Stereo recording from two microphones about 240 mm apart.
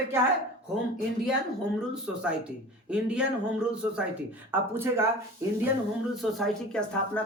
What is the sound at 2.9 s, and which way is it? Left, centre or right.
Speech, centre.